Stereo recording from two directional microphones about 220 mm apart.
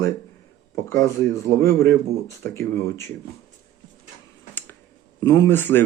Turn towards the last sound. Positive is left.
turn(degrees=10)  # may be behind; listen again after turning